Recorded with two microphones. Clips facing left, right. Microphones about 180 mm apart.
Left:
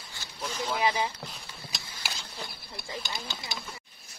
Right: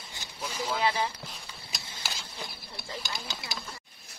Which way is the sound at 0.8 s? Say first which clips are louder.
Left 1 dB; 10° left (ahead or behind).